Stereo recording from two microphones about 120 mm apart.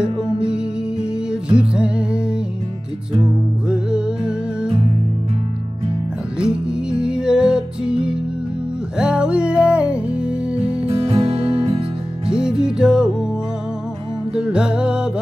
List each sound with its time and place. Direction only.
0.5 s music: 10° right (ahead or behind)
3.6 s music: 5° right (ahead or behind)
6.4 s music: 5° right (ahead or behind)
10.9 s music: 50° right (ahead or behind)
12.3 s music: 5° right (ahead or behind)
14.3 s music: 5° right (ahead or behind)